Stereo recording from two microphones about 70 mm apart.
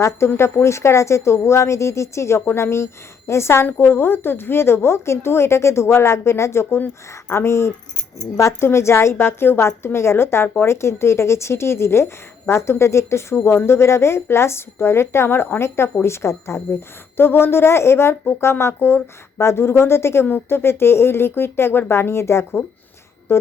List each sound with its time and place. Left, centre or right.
0.3 s a woman's voice: left